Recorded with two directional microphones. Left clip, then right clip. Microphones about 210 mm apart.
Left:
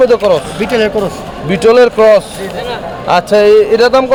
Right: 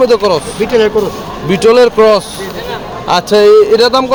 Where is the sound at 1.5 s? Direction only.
Centre (ahead or behind).